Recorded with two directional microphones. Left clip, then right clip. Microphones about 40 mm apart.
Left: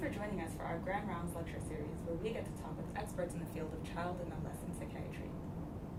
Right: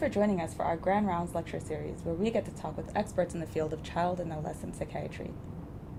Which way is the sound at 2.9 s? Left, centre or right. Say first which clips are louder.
Right 11 dB; centre.